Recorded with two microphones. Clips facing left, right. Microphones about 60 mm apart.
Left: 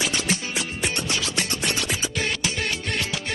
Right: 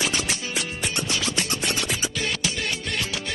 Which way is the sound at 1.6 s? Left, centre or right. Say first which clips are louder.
Even; centre.